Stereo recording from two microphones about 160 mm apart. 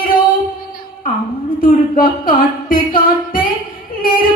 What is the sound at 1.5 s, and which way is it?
Speech, 60° left (ahead or behind).